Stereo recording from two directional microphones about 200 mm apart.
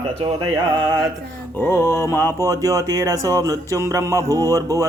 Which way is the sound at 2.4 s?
15° right (ahead or behind).